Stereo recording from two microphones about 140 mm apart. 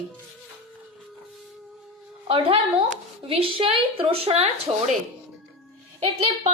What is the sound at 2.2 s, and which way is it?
A woman's voice, 40° right (ahead or behind).